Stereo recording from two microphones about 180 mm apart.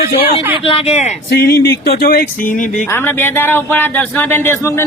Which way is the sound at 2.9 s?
10° left (ahead or behind).